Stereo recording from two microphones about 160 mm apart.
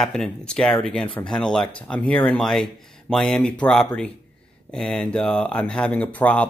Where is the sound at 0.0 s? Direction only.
5° left (ahead or behind).